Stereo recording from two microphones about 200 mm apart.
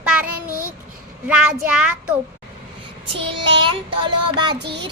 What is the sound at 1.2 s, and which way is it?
Speech, 5° right (ahead or behind).